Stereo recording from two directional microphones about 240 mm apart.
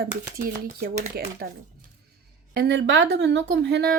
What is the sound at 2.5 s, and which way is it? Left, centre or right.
A woman's voice, right.